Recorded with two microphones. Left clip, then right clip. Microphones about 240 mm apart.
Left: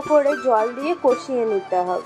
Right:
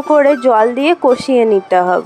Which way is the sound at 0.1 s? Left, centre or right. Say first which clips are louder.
Right 7 dB; right.